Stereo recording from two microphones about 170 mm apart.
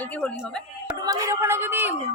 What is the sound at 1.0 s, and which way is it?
Speech, 20° right (ahead or behind).